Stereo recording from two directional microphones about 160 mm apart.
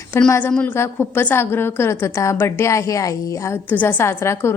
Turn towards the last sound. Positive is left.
turn(degrees=15)  # may be behind; listen again after turning